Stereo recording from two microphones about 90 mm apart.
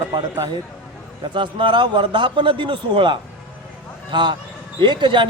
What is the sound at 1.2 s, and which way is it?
A man's voice, 60° right (ahead or behind).